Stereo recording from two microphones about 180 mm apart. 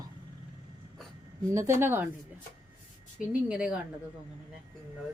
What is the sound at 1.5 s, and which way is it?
Speech, 15° right (ahead or behind).